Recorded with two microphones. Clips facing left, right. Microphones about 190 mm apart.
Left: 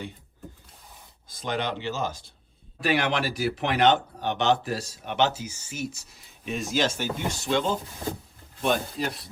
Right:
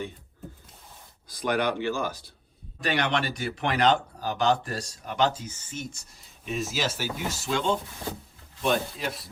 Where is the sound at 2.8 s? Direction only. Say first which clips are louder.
Left 2 dB; 5° left (ahead or behind).